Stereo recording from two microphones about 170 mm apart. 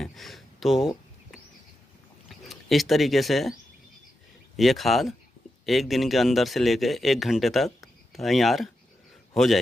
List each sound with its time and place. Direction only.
0.0 s a sound: centre (ahead or behind)
2.2 s speech: centre (ahead or behind)
4.6 s a man's voice: centre (ahead or behind)